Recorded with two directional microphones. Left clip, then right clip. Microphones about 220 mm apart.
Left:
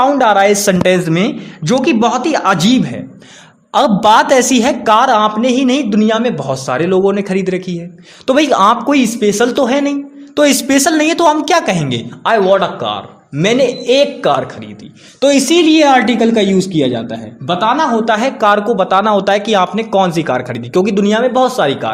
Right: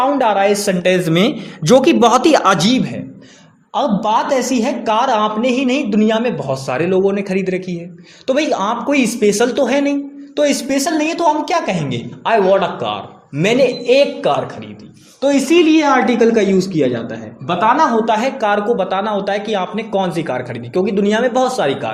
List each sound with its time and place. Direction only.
0.0 s a man's voice: 30° left (ahead or behind)
1.1 s a man's voice: centre (ahead or behind)
2.6 s speech: 25° left (ahead or behind)
3.7 s speech: 35° left (ahead or behind)
15.2 s speech: 40° left (ahead or behind)